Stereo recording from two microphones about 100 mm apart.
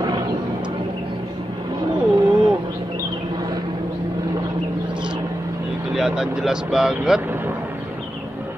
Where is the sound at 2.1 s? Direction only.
50° right (ahead or behind).